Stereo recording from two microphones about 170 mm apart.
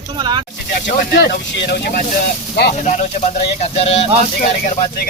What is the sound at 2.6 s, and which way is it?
Speech, 80° left.